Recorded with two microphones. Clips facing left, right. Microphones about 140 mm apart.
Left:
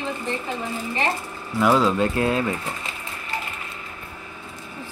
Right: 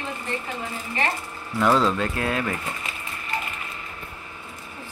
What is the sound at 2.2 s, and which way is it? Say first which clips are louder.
Speech: left 4 dB; 25° left (ahead or behind).